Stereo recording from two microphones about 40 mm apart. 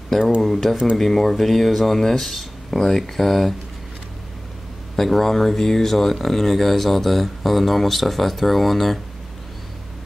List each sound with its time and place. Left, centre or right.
0.4 s speech: centre
4.9 s speech: centre